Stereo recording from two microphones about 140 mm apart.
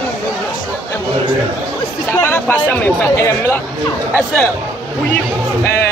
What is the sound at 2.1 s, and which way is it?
Speech, 15° left (ahead or behind).